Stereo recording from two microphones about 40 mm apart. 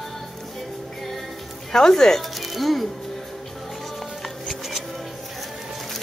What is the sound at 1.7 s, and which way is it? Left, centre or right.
Speech, centre.